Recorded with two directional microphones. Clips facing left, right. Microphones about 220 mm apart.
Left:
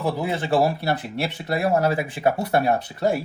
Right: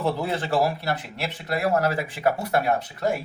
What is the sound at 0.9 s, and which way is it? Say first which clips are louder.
Speech: left 4 dB; 25° left (ahead or behind).